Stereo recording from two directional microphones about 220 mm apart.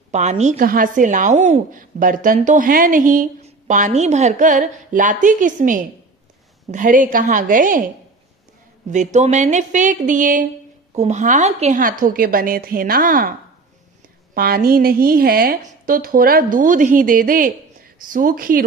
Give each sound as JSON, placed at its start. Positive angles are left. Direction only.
{"t": 0.1, "sound": "a woman's voice", "side_deg": -30}
{"t": 8.9, "sound": "a woman's voice", "side_deg": -35}
{"t": 14.3, "sound": "a woman's voice", "side_deg": -45}